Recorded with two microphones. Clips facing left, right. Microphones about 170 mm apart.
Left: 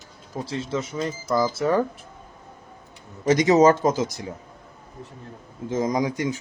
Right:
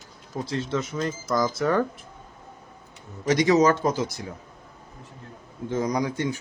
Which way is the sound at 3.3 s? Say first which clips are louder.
Left 3 dB; 25° left (ahead or behind).